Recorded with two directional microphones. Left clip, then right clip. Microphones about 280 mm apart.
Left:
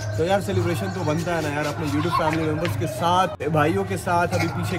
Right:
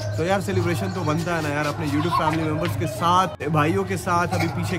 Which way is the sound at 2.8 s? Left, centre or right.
Centre.